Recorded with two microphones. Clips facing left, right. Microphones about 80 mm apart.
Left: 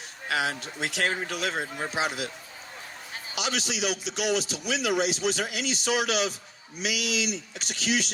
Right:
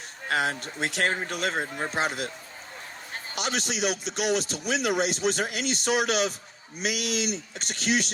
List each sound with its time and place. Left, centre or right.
0.3 s a man's voice: right